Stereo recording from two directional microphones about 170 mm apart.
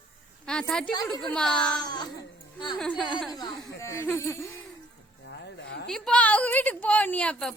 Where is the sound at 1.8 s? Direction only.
25° left (ahead or behind).